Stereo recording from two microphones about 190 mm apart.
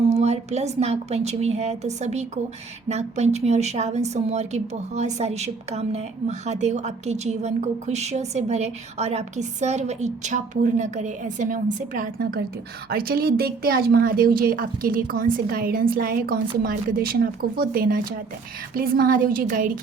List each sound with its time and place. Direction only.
0.1 s a woman's voice: 35° right (ahead or behind)